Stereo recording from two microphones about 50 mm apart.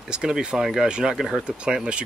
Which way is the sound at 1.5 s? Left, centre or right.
Centre.